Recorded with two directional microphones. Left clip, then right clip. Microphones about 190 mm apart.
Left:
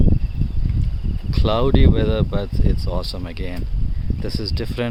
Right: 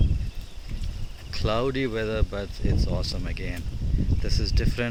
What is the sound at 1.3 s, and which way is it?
Speech, 15° left (ahead or behind).